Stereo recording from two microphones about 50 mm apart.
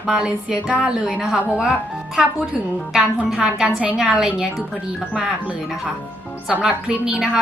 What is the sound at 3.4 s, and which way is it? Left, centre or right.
Speech, centre.